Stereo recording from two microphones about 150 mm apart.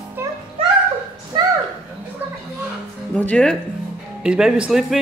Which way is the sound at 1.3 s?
30° right (ahead or behind).